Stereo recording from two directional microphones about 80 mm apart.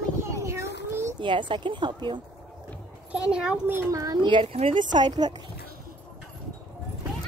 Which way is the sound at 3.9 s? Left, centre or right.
Right.